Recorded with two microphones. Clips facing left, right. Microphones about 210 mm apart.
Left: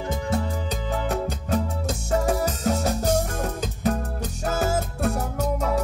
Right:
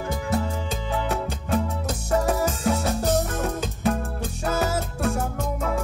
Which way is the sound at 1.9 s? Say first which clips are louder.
Even; 25° left (ahead or behind).